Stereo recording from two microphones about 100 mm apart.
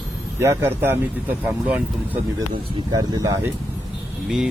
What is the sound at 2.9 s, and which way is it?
Speech, 40° right (ahead or behind).